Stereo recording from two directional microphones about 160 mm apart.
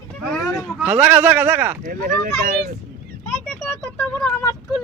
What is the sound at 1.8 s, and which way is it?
Speech, 55° right (ahead or behind).